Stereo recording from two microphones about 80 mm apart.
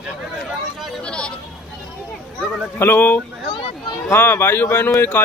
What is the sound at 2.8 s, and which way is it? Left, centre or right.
A man's voice, left.